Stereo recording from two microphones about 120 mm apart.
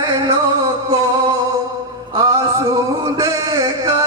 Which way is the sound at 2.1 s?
25° right (ahead or behind).